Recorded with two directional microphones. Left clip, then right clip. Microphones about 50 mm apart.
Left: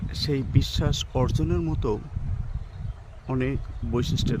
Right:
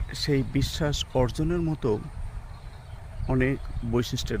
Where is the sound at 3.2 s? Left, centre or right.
Centre.